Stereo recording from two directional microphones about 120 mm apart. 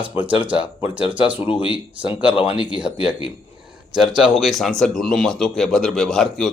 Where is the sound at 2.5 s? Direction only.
45° left (ahead or behind).